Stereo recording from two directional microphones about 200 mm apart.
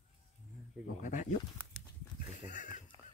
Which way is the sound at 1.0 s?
40° left (ahead or behind).